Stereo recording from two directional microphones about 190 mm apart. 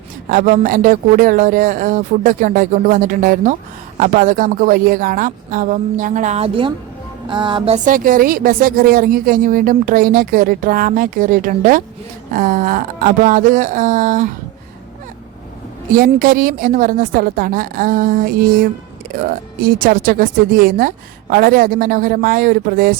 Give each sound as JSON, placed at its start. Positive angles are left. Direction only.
{"t": 0.3, "sound": "speech", "side_deg": -45}
{"t": 7.3, "sound": "music", "side_deg": -25}
{"t": 7.9, "sound": "speech", "side_deg": -45}
{"t": 15.9, "sound": "speech", "side_deg": -45}